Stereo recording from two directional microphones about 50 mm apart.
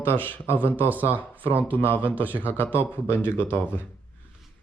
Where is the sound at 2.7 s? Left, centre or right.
Left.